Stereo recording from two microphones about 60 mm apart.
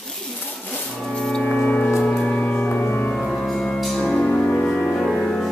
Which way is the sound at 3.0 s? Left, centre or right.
Centre.